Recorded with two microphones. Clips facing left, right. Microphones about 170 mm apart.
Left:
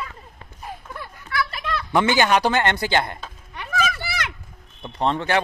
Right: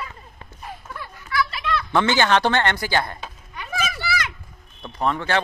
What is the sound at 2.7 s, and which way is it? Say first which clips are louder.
Speech: left 2 dB; 20° left (ahead or behind).